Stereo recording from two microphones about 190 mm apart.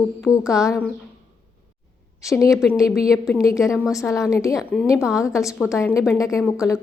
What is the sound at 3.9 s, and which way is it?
Speech, 15° left (ahead or behind).